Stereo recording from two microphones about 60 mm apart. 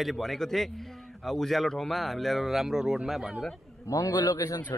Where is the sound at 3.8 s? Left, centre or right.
Left.